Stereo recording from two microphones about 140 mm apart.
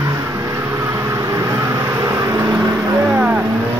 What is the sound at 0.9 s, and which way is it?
Vehicle, 20° right (ahead or behind).